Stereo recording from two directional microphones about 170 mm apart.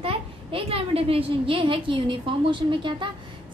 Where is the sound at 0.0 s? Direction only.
30° right (ahead or behind).